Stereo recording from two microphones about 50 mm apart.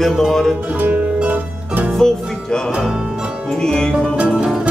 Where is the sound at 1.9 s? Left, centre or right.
Centre.